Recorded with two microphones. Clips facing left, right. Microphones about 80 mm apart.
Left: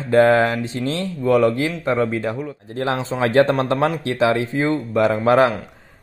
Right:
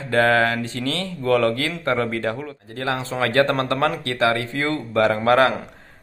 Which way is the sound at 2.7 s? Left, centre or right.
Left.